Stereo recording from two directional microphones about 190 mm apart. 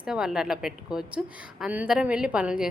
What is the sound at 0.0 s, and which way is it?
A woman's voice, 5° right (ahead or behind).